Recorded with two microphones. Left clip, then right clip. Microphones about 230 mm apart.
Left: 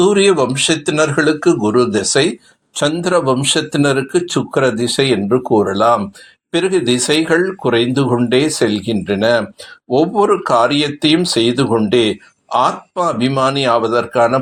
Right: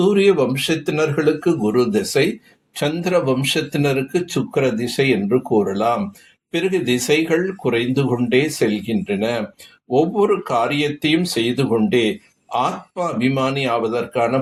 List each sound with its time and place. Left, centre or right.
0.0 s speech: left